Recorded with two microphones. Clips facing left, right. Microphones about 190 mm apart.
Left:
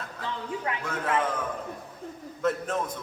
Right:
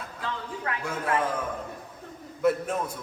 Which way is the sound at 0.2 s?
20° left (ahead or behind).